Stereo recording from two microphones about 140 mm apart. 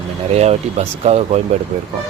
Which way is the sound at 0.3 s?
50° right (ahead or behind).